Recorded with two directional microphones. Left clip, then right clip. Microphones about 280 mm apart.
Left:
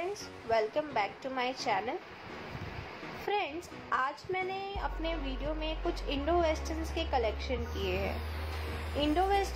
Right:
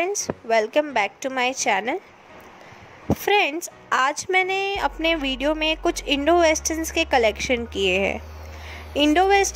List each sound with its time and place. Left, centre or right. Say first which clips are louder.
0.0 s a woman's voice: right 13 dB; right
3.3 s a woman's voice: right 14 dB; right